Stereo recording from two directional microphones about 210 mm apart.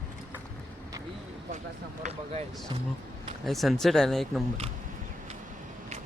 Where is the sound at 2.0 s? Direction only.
30° right (ahead or behind).